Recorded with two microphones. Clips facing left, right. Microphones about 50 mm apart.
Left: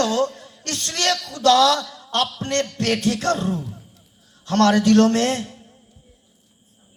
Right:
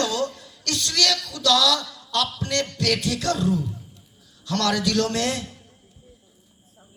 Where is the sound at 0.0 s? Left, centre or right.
Left.